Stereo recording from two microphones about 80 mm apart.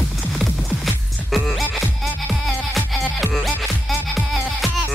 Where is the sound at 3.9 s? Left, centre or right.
Centre.